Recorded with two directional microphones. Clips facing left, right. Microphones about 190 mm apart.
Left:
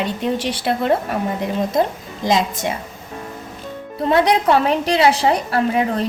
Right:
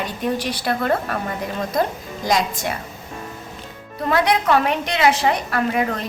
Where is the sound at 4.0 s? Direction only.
30° left (ahead or behind).